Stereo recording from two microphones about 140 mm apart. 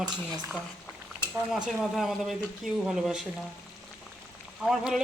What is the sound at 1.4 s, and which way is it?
Speech, 5° right (ahead or behind).